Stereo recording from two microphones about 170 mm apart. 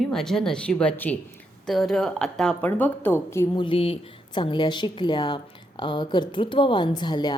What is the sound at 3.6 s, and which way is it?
A woman's voice, 30° left (ahead or behind).